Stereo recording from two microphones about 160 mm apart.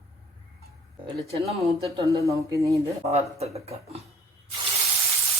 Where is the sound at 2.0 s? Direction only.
20° right (ahead or behind).